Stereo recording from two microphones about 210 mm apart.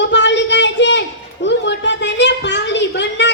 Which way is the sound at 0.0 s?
55° left (ahead or behind).